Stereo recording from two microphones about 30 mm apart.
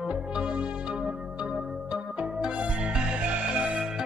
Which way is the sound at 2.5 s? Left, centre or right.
Right.